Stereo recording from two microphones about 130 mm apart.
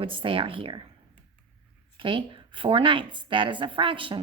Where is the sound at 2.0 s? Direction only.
40° right (ahead or behind).